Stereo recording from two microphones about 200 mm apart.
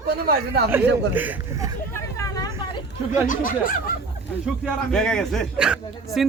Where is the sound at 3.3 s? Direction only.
45° left (ahead or behind).